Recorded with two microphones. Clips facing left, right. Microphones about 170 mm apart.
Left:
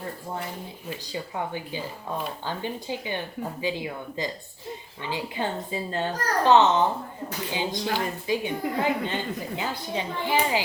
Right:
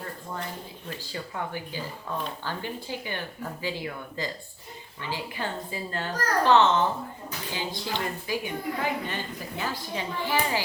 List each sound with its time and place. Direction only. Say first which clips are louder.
1.1 s a woman's voice: left 3 dB; 20° left (ahead or behind)